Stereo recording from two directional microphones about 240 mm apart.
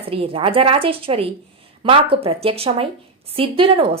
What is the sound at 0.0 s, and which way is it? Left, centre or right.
Speech, right.